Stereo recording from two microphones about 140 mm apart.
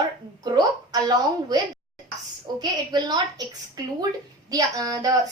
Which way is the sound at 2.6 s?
30° right (ahead or behind).